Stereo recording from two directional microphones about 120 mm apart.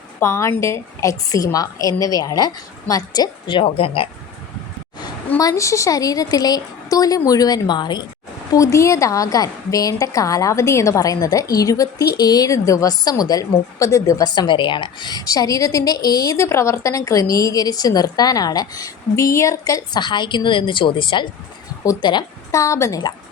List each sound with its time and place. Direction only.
0.2 s a woman's voice: 20° left (ahead or behind); by 4.1 s 50° left (ahead or behind)
5.4 s a woman's voice: 25° left (ahead or behind)
8.5 s a woman's voice: 25° left (ahead or behind)